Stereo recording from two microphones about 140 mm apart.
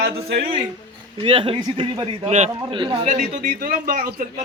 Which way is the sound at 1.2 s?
40° right (ahead or behind).